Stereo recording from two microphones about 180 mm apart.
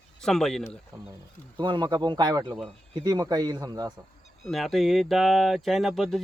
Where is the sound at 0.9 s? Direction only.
20° right (ahead or behind).